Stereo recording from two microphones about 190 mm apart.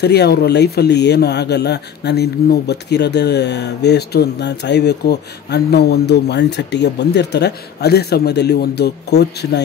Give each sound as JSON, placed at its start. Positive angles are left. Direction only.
{"t": 0.0, "sound": "speech", "side_deg": 60}